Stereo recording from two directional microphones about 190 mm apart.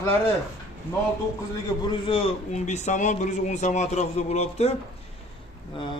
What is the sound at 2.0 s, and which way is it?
Speech, 30° left (ahead or behind).